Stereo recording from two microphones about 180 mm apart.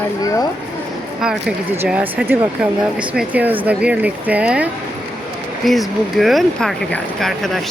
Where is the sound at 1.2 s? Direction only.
5° right (ahead or behind).